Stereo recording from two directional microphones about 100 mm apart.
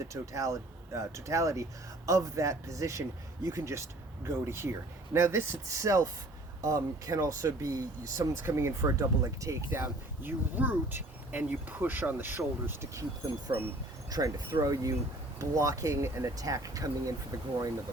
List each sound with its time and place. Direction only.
0.1 s speech: 30° right (ahead or behind)
10.2 s speech: 20° right (ahead or behind)
14.1 s speech: 40° right (ahead or behind)